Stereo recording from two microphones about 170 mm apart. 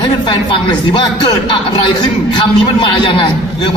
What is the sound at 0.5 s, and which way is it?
Speech, 30° left (ahead or behind).